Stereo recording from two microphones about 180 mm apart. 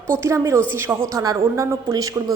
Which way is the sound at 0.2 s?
15° right (ahead or behind).